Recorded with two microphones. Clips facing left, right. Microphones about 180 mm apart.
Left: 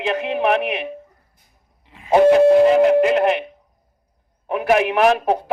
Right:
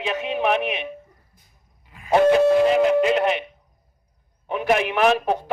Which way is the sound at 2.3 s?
55° left (ahead or behind).